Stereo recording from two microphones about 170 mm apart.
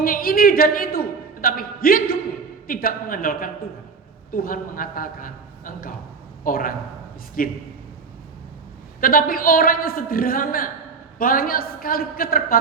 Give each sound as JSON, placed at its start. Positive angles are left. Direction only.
{"t": 0.0, "sound": "a man's voice", "side_deg": 60}
{"t": 9.0, "sound": "a man's voice", "side_deg": 55}